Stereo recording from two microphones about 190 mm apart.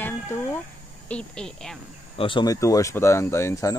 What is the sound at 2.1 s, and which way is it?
Speech, 25° left (ahead or behind).